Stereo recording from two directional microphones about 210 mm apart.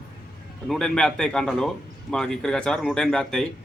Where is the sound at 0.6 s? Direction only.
5° left (ahead or behind).